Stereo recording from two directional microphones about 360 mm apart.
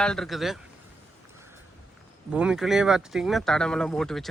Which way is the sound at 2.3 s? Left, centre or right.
Centre.